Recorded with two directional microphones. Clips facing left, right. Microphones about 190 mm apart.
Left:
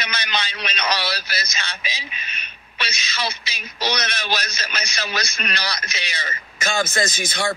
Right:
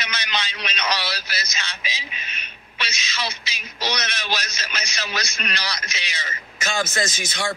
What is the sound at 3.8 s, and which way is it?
A man's voice, 55° left (ahead or behind).